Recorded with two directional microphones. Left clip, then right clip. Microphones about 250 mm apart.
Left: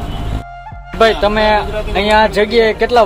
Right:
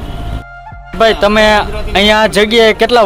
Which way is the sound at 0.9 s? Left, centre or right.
Right.